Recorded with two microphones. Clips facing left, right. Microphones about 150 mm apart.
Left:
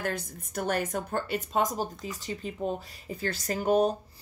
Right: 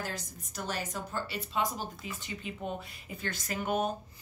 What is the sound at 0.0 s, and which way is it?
A woman's voice, 55° left (ahead or behind).